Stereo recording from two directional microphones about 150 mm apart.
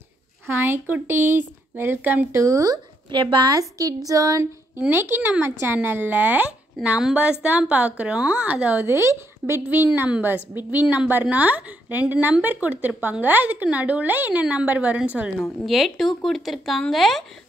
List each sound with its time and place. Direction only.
0.5 s speech: 15° right (ahead or behind); by 17.2 s centre (ahead or behind)